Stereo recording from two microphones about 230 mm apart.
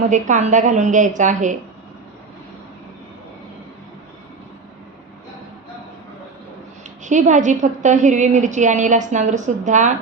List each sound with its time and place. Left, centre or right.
0.1 s a woman's voice: right
7.0 s a woman's voice: right